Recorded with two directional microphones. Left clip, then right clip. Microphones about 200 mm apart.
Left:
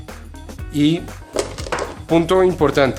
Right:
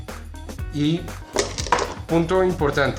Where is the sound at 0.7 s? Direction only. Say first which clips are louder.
Left 6 dB; 50° left (ahead or behind).